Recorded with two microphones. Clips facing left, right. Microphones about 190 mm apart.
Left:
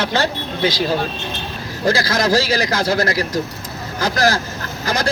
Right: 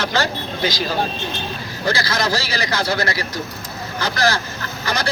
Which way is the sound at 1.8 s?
45° left (ahead or behind).